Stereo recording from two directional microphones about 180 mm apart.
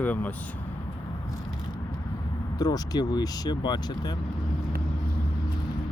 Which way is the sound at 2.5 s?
20° left (ahead or behind).